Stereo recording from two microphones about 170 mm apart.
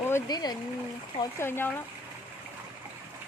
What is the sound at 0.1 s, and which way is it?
Speech, 25° left (ahead or behind).